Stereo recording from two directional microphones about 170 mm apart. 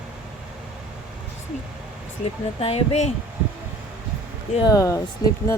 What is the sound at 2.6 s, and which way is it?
Speech, 35° left (ahead or behind).